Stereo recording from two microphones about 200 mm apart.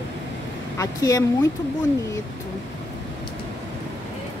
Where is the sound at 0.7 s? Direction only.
15° left (ahead or behind).